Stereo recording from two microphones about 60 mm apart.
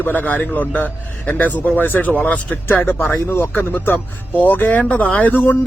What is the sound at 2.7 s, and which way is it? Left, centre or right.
Speech, left.